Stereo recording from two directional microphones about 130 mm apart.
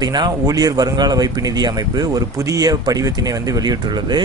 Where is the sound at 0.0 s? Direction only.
35° right (ahead or behind).